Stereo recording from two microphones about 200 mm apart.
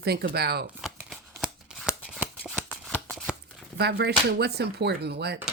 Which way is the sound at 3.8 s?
55° right (ahead or behind).